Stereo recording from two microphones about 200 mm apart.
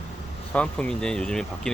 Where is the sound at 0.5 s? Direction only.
5° left (ahead or behind).